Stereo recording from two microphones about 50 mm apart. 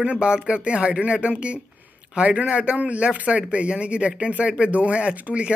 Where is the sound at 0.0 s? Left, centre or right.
Right.